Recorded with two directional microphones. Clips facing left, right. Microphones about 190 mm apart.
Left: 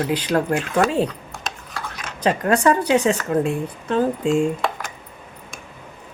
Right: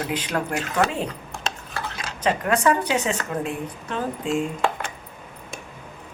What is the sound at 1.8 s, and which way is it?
Tick-tock, 25° right (ahead or behind).